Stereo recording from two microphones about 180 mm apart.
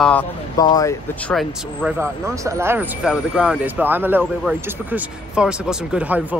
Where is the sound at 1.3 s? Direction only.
Centre (ahead or behind).